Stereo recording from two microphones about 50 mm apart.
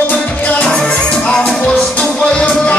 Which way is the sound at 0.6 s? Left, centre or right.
Centre.